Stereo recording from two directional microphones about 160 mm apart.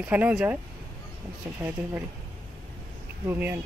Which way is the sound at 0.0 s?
10° right (ahead or behind).